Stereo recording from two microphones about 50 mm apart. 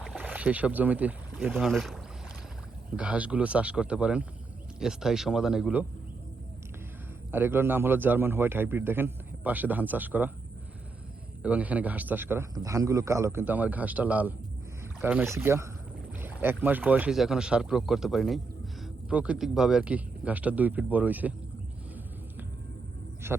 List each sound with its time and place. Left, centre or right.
0.2 s speech: right
1.5 s speech: centre
3.0 s a man's voice: right
4.8 s speech: centre
7.3 s a man's voice: right
11.4 s speech: right
12.6 s a man's voice: right
13.4 s speech: right
15.0 s a man's voice: right
16.4 s speech: right
17.1 s speech: centre
19.1 s a man's voice: right
19.4 s speech: centre
19.8 s speech: right